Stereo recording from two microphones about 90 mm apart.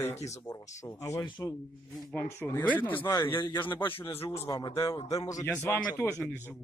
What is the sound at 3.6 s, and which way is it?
Speech, 20° left (ahead or behind).